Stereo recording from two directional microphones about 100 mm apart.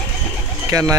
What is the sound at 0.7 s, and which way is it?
Speech, 35° right (ahead or behind).